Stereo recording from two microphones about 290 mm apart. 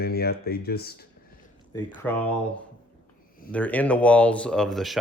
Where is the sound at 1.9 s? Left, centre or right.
Centre.